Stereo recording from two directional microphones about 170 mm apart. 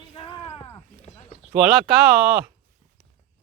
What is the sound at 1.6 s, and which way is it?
Speech, 5° right (ahead or behind).